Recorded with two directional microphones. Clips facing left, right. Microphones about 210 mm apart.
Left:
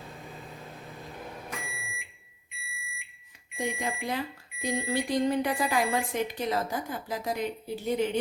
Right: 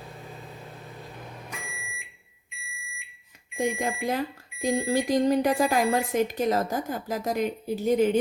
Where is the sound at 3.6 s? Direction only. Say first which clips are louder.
Right 5 dB; 45° right (ahead or behind).